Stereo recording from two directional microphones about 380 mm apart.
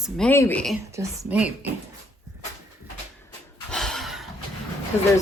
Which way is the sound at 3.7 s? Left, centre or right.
Centre.